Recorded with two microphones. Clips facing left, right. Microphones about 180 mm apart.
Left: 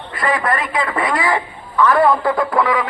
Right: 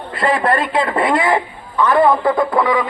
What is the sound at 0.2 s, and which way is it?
A man's voice, 30° right (ahead or behind).